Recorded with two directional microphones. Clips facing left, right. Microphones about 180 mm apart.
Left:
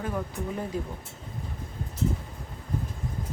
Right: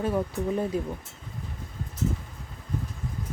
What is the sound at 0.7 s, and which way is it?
Speech, 20° right (ahead or behind).